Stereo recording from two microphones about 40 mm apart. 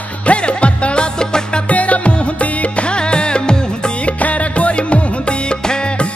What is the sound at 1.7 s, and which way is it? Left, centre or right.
Music, left.